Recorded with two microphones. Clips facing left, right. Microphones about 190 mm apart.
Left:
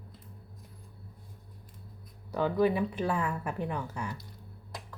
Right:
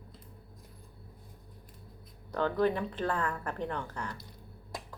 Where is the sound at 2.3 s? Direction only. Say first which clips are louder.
Left 2 dB; 10° left (ahead or behind).